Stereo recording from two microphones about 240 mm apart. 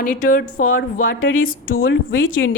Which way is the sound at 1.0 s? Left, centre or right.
Left.